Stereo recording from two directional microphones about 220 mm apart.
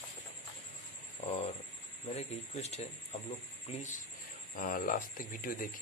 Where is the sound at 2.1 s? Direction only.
30° left (ahead or behind).